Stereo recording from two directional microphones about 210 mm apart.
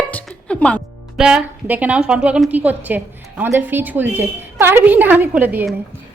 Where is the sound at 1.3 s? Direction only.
5° right (ahead or behind).